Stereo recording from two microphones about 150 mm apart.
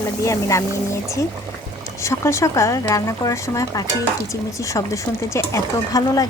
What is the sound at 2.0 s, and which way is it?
Speech, 20° left (ahead or behind).